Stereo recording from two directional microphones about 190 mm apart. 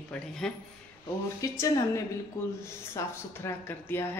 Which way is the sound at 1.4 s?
15° left (ahead or behind).